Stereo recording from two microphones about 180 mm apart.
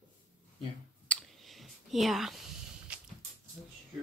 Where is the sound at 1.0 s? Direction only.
Centre (ahead or behind).